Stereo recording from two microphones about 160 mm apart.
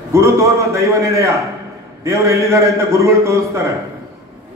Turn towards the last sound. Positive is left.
turn(degrees=-20)  # may be behind; listen again after turning